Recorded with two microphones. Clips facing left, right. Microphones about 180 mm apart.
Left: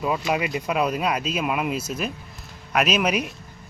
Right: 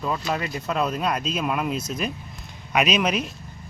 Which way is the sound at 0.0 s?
10° left (ahead or behind).